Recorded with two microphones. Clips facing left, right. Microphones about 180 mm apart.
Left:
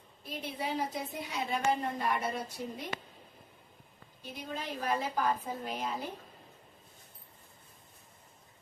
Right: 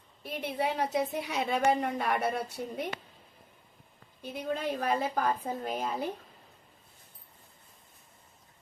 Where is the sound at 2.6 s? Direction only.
45° right (ahead or behind).